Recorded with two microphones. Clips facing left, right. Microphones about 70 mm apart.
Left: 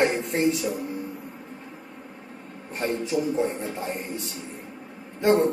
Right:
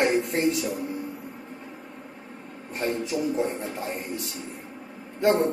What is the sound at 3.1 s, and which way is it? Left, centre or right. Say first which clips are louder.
Music: left 3 dB; right.